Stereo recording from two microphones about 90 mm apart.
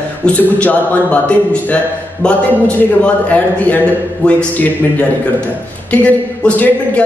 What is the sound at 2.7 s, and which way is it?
A man's voice, 15° left (ahead or behind).